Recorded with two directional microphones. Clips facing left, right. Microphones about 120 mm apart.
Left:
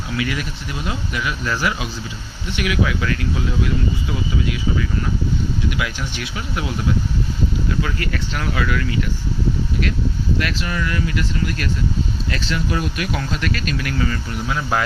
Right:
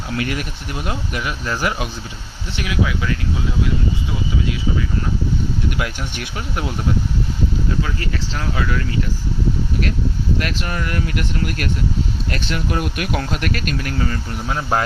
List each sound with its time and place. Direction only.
0.2 s speech: 45° right (ahead or behind)
2.6 s speech: 25° right (ahead or behind)
5.7 s speech: 45° right (ahead or behind)
7.8 s speech: 25° right (ahead or behind)
10.4 s speech: 45° right (ahead or behind)